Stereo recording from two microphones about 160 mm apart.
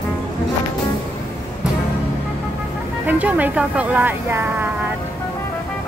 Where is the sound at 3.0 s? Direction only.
10° right (ahead or behind).